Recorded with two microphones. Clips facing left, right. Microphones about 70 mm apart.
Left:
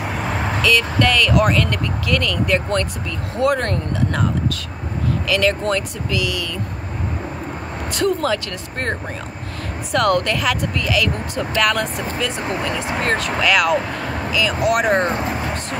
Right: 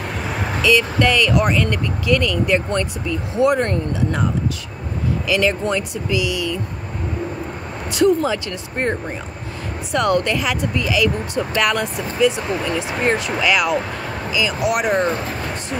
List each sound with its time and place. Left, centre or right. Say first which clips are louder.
0.6 s speech: right 2 dB; centre
5.3 s speech: even; centre
7.9 s speech: right 3 dB; centre
9.9 s speech: even; centre
14.8 s speech: even; left
15.0 s speech: left 1 dB; left